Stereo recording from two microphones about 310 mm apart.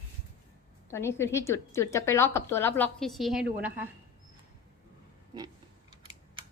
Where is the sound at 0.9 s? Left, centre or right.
Centre.